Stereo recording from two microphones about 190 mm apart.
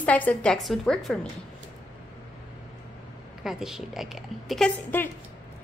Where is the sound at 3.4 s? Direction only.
Centre (ahead or behind).